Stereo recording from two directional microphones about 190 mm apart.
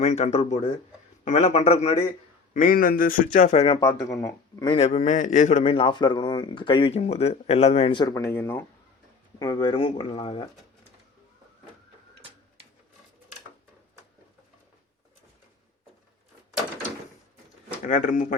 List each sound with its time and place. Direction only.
0.0 s a man's voice: 35° left (ahead or behind)
2.5 s a man's voice: 45° left (ahead or behind)
3.3 s a man's voice: 35° left (ahead or behind)
3.8 s a man's voice: 15° left (ahead or behind)
4.8 s a man's voice: 35° left (ahead or behind); by 8.6 s 10° left (ahead or behind)
9.4 s a man's voice: 20° left (ahead or behind)
17.8 s a man's voice: 40° left (ahead or behind)